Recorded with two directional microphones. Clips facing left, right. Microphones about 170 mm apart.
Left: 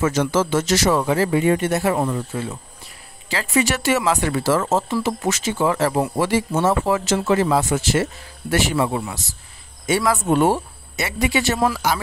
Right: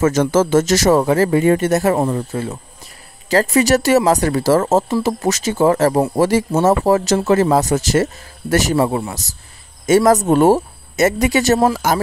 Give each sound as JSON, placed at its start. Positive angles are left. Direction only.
{"t": 0.0, "sound": "speech", "side_deg": -45}